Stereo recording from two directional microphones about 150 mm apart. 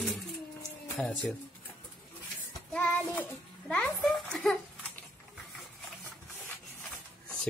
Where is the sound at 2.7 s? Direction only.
10° left (ahead or behind).